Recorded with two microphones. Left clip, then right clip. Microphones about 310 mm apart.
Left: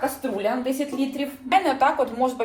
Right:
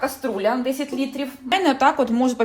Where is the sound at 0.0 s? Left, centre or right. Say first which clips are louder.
Right 3 dB; right.